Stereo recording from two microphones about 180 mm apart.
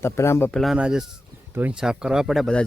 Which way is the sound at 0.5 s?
Centre (ahead or behind).